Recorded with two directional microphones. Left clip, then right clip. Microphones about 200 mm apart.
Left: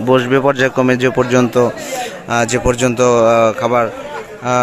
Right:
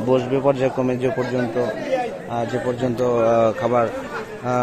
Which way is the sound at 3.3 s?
5° left (ahead or behind).